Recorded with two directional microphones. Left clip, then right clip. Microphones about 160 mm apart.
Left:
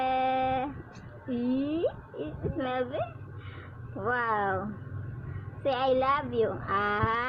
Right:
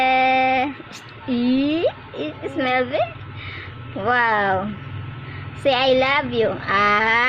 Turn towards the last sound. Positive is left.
turn(degrees=-25)  # may be behind; listen again after turning